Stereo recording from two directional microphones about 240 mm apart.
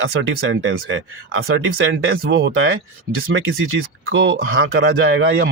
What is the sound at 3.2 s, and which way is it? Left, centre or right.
Speech, right.